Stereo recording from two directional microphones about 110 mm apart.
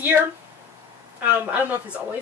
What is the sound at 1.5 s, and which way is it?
Speech, 15° right (ahead or behind).